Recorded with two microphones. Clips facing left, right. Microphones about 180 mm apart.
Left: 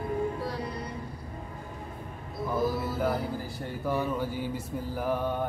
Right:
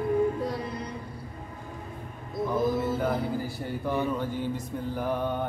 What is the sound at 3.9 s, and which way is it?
Mantra, 5° left (ahead or behind).